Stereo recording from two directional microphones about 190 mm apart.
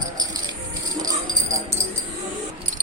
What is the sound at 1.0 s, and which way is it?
Music, 20° right (ahead or behind).